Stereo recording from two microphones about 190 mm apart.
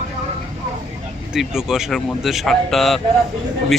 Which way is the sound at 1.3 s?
5° right (ahead or behind).